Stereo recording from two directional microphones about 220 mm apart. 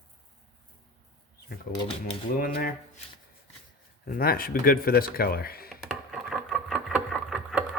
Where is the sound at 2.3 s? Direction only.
40° left (ahead or behind).